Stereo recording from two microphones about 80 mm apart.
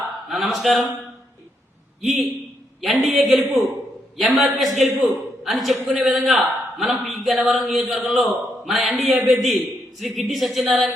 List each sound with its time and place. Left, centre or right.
0.3 s a man's voice: centre
2.0 s a man's voice: centre